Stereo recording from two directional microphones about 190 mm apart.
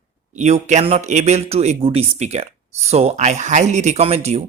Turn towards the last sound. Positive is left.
turn(degrees=-35)  # may be behind; listen again after turning